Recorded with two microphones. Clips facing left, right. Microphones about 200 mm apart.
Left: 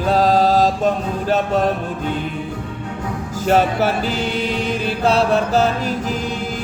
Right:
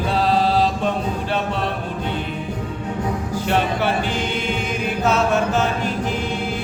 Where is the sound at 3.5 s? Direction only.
40° left (ahead or behind).